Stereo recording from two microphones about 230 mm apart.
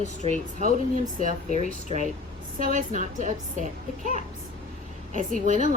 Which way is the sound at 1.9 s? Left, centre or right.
Right.